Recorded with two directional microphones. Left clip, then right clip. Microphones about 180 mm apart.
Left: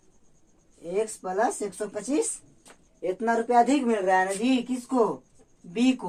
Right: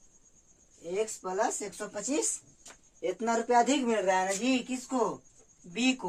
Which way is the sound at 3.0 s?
35° right (ahead or behind).